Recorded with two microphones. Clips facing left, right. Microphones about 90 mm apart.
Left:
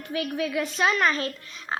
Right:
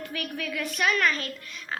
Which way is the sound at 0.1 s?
20° left (ahead or behind).